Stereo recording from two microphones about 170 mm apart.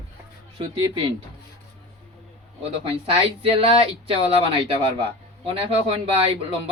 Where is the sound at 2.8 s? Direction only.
35° right (ahead or behind).